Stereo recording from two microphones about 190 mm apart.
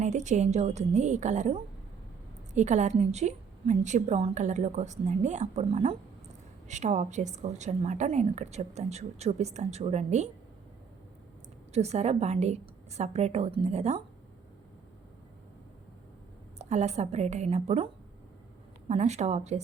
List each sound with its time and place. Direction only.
0.0 s a woman's voice: 40° right (ahead or behind)
11.7 s a woman's voice: 35° right (ahead or behind)
16.6 s a woman's voice: 35° right (ahead or behind)
18.9 s a woman's voice: 35° right (ahead or behind)